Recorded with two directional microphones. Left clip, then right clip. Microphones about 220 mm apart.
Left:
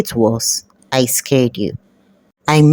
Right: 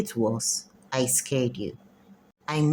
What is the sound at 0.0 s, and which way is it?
A woman's voice, 35° left (ahead or behind).